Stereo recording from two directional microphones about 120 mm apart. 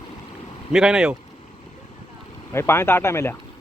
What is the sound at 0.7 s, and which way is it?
Speech, 5° right (ahead or behind).